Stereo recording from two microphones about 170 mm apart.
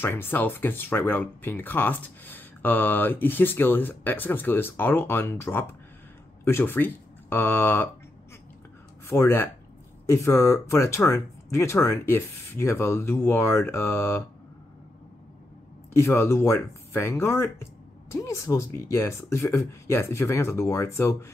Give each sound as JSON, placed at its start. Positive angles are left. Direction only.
{"t": 0.0, "sound": "speech", "side_deg": 10}
{"t": 9.0, "sound": "speech", "side_deg": 15}
{"t": 15.9, "sound": "speech", "side_deg": 15}